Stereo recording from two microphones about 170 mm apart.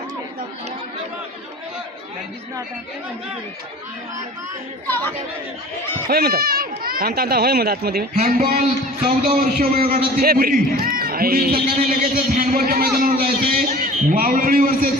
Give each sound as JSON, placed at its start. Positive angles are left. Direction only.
{"t": 4.9, "sound": "speech", "side_deg": 10}
{"t": 6.1, "sound": "a man's voice", "side_deg": -60}
{"t": 8.2, "sound": "a man's voice", "side_deg": -45}
{"t": 9.0, "sound": "a man's voice", "side_deg": -55}